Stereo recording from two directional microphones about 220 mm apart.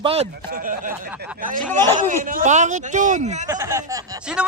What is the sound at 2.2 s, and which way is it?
Speech, 35° right (ahead or behind).